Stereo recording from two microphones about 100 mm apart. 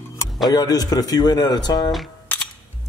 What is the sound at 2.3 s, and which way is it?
Music, 15° left (ahead or behind).